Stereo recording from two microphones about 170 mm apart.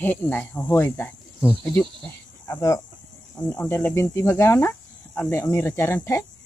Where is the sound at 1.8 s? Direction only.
5° left (ahead or behind).